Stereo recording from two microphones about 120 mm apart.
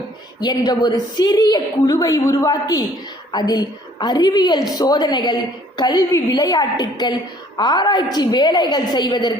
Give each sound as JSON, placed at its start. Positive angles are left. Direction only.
{"t": 0.3, "sound": "a woman's voice", "side_deg": 35}